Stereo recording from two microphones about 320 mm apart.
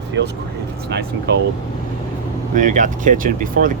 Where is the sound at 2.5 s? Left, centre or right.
Right.